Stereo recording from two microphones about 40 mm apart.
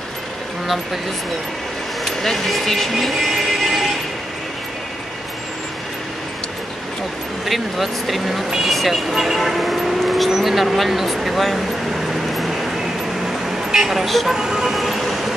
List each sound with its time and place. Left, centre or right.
2.0 s music: centre
7.4 s speech: centre
12.1 s vehicle: centre
13.8 s speech: centre
14.3 s speech: centre
14.8 s vehicle: centre